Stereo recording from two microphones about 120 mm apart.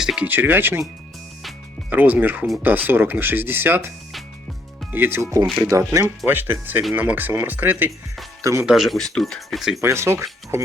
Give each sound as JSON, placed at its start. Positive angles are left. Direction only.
{"t": 0.0, "sound": "music", "side_deg": -5}
{"t": 0.3, "sound": "speech", "side_deg": -15}
{"t": 1.9, "sound": "speech", "side_deg": -15}
{"t": 8.4, "sound": "speech", "side_deg": -25}
{"t": 8.6, "sound": "speech", "side_deg": -5}
{"t": 9.8, "sound": "speech", "side_deg": -20}